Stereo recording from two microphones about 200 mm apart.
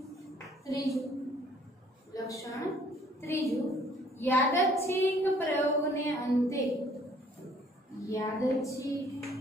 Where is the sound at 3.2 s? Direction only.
15° left (ahead or behind).